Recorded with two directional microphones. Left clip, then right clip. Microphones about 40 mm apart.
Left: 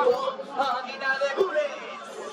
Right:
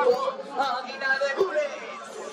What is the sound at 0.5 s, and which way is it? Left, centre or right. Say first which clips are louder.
Yodeling: left 1 dB; left.